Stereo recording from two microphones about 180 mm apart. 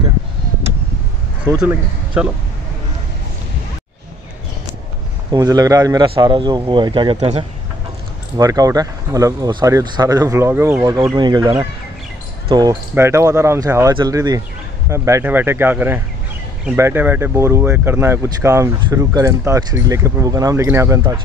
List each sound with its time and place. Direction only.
1.4 s speech: 10° right (ahead or behind)
5.3 s speech: 20° right (ahead or behind)
8.4 s speech: 20° right (ahead or behind)